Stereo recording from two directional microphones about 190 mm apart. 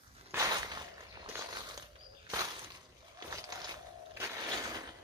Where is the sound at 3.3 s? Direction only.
20° right (ahead or behind).